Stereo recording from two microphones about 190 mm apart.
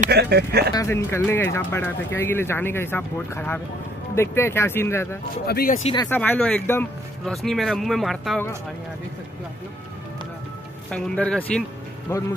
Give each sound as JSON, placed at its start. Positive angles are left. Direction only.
{"t": 0.1, "sound": "speech", "side_deg": -60}
{"t": 0.7, "sound": "speech", "side_deg": 15}
{"t": 5.5, "sound": "speech", "side_deg": 55}
{"t": 6.0, "sound": "speech", "side_deg": 10}
{"t": 10.9, "sound": "speech", "side_deg": 5}